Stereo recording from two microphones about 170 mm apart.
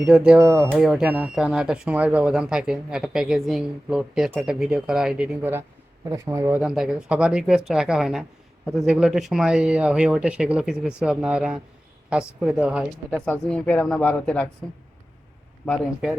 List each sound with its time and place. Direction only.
0.0 s speech: 5° right (ahead or behind)
0.8 s speech: centre (ahead or behind)
6.6 s speech: 5° right (ahead or behind)
13.1 s speech: 5° left (ahead or behind)
15.6 s speech: centre (ahead or behind)